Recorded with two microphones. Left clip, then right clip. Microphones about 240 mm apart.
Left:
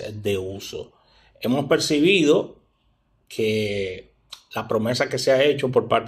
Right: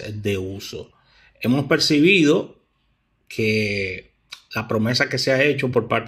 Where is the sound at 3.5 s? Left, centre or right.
Right.